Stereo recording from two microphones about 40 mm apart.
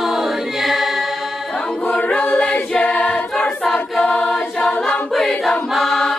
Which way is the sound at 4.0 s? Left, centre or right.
Left.